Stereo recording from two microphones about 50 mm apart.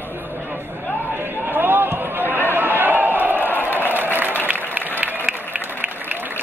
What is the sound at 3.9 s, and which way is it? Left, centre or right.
Applause, right.